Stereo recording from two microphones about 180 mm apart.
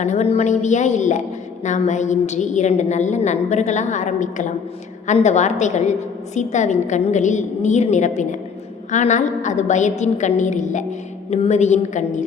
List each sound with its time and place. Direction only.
0.0 s a woman's voice: 40° left (ahead or behind)